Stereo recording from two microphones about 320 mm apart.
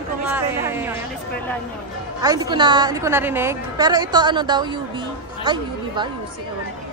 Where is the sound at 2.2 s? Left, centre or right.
Centre.